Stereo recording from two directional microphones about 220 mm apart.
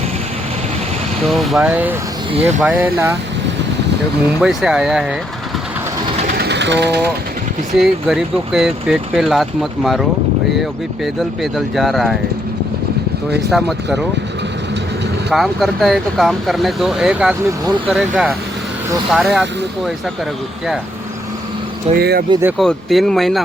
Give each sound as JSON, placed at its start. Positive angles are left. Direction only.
{"t": 1.2, "sound": "speech", "side_deg": 0}
{"t": 4.4, "sound": "speech", "side_deg": -5}
{"t": 6.2, "sound": "a sound", "side_deg": -45}
{"t": 7.8, "sound": "speech", "side_deg": 0}
{"t": 13.5, "sound": "speech", "side_deg": 0}
{"t": 15.3, "sound": "speech", "side_deg": 0}
{"t": 21.9, "sound": "speech", "side_deg": -45}
{"t": 22.3, "sound": "speech", "side_deg": -10}
{"t": 22.5, "sound": "speech", "side_deg": 0}